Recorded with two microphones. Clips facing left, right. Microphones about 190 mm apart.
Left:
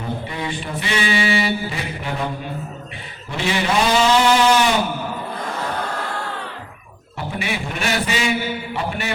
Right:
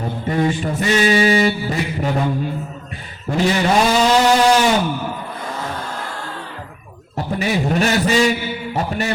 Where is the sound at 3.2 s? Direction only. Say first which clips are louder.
Right 7 dB; 40° right (ahead or behind).